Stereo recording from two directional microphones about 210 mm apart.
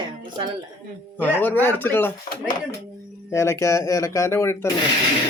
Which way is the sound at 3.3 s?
15° left (ahead or behind).